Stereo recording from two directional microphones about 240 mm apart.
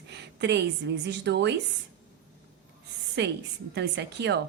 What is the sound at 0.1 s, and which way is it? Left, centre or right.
A woman's voice, right.